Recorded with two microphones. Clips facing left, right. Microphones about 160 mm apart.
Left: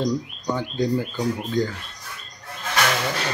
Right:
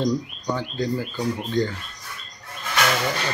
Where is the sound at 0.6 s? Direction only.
15° left (ahead or behind).